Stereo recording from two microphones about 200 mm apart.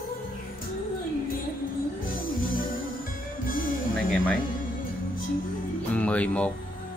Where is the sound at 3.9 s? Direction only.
5° left (ahead or behind).